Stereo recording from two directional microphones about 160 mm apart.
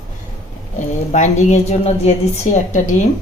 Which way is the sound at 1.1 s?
45° left (ahead or behind).